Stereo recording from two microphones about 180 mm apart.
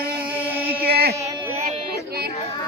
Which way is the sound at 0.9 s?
60° right (ahead or behind).